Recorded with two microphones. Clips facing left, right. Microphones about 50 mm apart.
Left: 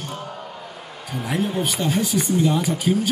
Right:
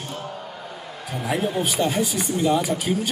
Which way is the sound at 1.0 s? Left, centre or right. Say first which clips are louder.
Even; centre.